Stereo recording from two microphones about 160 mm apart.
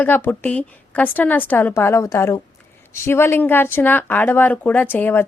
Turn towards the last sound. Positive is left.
turn(degrees=10)  # may be behind; listen again after turning